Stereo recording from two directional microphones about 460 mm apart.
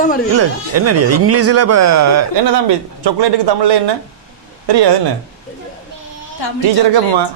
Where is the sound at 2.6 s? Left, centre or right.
Right.